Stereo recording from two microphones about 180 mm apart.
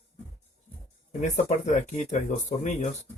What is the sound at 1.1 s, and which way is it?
Speech, 40° left (ahead or behind).